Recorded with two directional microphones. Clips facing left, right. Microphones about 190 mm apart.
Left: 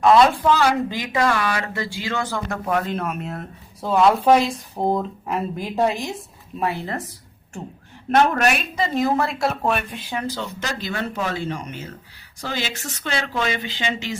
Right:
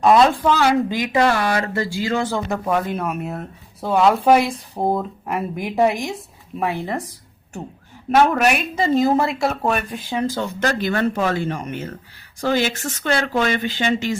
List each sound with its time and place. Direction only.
0.2 s speech: centre (ahead or behind)
0.9 s speech: 15° right (ahead or behind)
1.1 s speech: 30° right (ahead or behind)
2.1 s speech: 15° right (ahead or behind)
2.6 s speech: 5° right (ahead or behind)
8.1 s speech: 5° right (ahead or behind)
10.2 s speech: 50° right (ahead or behind)